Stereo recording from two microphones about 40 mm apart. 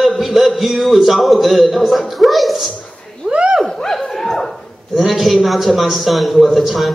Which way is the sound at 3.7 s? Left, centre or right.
Centre.